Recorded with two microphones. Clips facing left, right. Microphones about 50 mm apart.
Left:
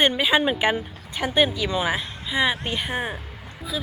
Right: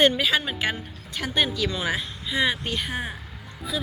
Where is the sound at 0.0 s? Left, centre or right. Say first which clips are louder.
Left 1 dB; centre.